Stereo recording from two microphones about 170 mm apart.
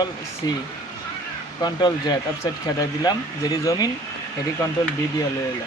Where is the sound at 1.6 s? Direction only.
25° left (ahead or behind).